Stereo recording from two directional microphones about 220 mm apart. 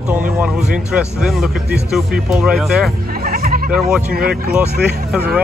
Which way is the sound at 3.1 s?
40° right (ahead or behind).